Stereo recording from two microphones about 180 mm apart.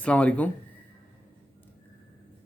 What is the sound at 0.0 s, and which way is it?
Speech, 5° left (ahead or behind).